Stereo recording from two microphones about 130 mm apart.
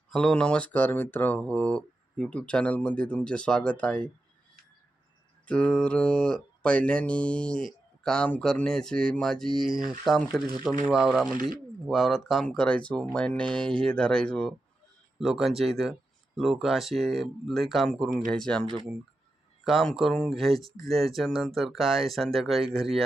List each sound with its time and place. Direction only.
0.1 s mantra: 5° left (ahead or behind)
5.5 s mantra: 5° left (ahead or behind)
10.0 s speech: 5° left (ahead or behind)
13.1 s mantra: 10° left (ahead or behind)
15.2 s speech: centre (ahead or behind)
18.6 s speech: 45° right (ahead or behind)
19.6 s speech: centre (ahead or behind)